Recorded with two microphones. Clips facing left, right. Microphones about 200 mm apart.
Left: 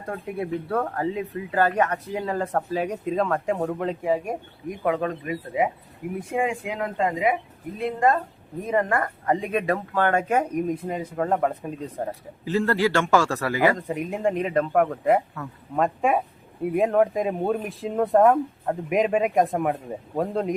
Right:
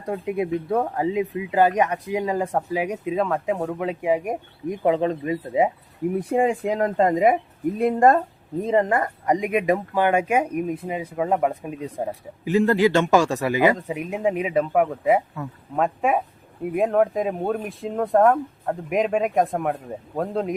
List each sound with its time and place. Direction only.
0.0 s speech: 15° right (ahead or behind)
4.0 s speech: 15° right (ahead or behind)
6.1 s speech: 35° right (ahead or behind)
8.6 s speech: 25° right (ahead or behind)
13.7 s speech: 5° right (ahead or behind)